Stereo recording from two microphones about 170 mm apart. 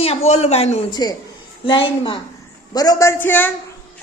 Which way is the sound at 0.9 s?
25° left (ahead or behind).